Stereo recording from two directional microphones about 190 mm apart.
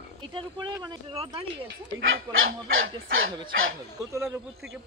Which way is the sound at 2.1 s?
90° right.